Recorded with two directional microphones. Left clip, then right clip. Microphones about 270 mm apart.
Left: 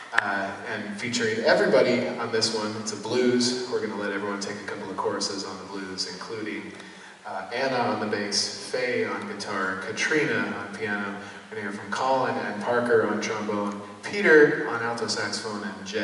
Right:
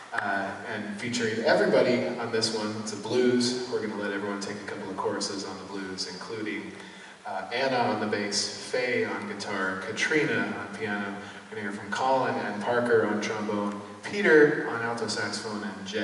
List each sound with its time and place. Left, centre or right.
0.1 s a man's voice: centre
7.5 s a man's voice: centre